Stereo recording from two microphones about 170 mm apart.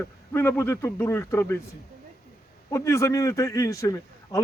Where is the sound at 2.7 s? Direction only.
15° left (ahead or behind).